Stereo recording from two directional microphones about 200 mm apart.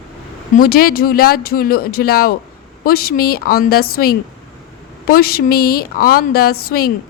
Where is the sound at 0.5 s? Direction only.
45° left (ahead or behind).